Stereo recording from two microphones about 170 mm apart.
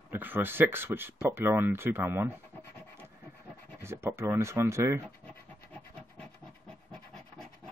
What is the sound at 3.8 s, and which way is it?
Speech, 15° right (ahead or behind).